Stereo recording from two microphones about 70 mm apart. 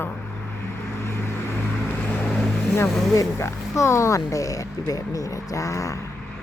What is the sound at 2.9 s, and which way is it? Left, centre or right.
Speech, centre.